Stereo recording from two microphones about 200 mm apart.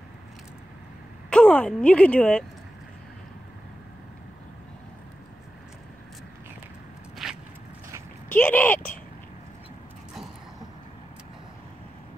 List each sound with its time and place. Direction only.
1.3 s speech: 5° left (ahead or behind)
7.2 s walk: centre (ahead or behind)
8.3 s a sound: 10° left (ahead or behind)